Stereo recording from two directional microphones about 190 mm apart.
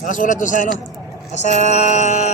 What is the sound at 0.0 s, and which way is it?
Speech, 40° left (ahead or behind).